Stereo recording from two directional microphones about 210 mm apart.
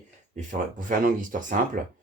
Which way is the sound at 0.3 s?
40° right (ahead or behind).